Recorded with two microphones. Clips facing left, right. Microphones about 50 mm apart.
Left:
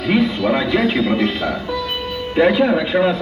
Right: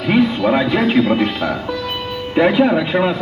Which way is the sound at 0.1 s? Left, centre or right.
Centre.